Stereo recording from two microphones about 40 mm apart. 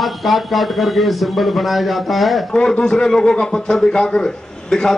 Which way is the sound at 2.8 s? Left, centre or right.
Centre.